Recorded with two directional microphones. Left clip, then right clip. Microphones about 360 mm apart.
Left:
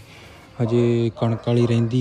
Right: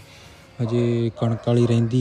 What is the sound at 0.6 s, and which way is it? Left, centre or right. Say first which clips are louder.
Speech: left 3 dB; centre.